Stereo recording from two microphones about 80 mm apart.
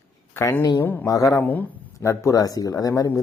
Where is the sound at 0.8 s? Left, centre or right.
Left.